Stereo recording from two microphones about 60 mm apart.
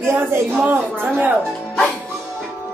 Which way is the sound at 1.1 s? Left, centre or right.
Right.